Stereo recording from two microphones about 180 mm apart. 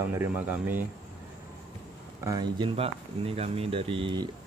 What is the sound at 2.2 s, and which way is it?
Speech, 20° right (ahead or behind).